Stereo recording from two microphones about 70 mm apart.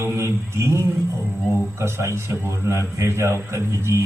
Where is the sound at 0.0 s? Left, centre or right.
Right.